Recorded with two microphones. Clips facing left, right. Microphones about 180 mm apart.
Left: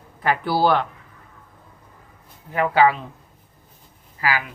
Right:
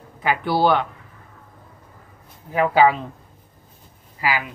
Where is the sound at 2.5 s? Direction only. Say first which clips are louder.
Right 1 dB; 15° right (ahead or behind).